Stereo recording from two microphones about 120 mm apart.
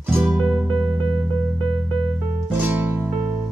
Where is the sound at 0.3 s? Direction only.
5° right (ahead or behind).